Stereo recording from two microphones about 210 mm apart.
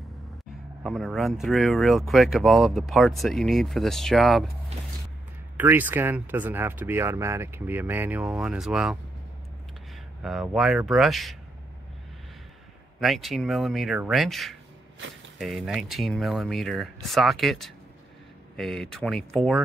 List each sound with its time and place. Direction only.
0.8 s speech: centre (ahead or behind)
4.7 s a sound: 30° right (ahead or behind)
5.6 s speech: 10° right (ahead or behind)
10.2 s speech: centre (ahead or behind)
13.0 s speech: centre (ahead or behind)